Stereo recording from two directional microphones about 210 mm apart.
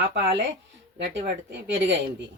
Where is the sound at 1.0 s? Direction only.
55° right (ahead or behind).